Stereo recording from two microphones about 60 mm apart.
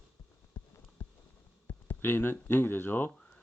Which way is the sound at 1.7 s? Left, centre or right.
Left.